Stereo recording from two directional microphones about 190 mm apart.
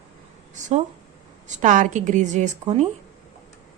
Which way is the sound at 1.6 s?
40° right (ahead or behind).